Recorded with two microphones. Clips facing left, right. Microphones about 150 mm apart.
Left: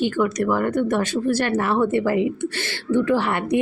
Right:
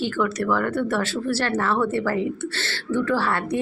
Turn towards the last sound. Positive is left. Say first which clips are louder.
# left 3 dB
turn(degrees=15)  # may be behind; listen again after turning